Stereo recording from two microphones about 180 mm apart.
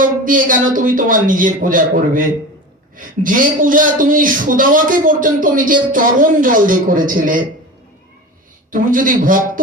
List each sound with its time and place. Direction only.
0.0 s speech: 50° right (ahead or behind)
8.7 s speech: 50° right (ahead or behind)